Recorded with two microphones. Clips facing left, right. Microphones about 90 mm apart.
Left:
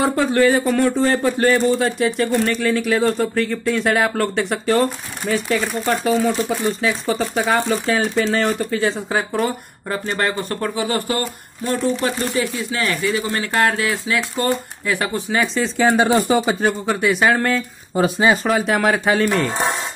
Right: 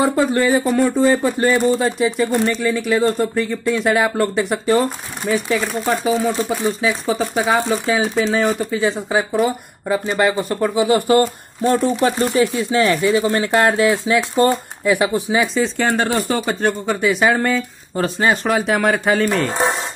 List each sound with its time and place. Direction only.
0.0 s speech: 5° right (ahead or behind); by 11.2 s 20° right (ahead or behind)
11.6 s speech: 35° right (ahead or behind); by 19.6 s centre (ahead or behind)